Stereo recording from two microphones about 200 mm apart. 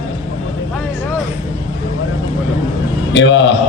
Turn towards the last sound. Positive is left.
turn(degrees=60)  # may be behind; listen again after turning